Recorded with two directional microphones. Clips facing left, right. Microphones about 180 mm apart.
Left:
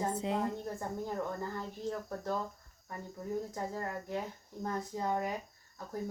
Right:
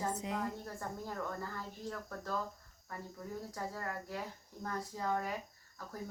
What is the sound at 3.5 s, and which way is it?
A woman's voice, 20° left (ahead or behind).